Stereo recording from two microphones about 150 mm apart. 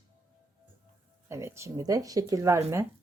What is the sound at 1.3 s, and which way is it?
Speech, 15° right (ahead or behind).